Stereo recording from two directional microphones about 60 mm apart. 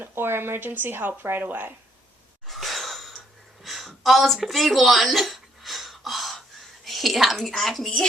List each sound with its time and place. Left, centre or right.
0.0 s speech: right
2.5 s gasp: centre
3.6 s a sound: centre
6.8 s speech: centre